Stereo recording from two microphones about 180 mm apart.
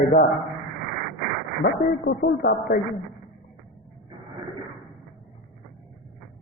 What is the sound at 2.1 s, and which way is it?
Speech, 65° left (ahead or behind).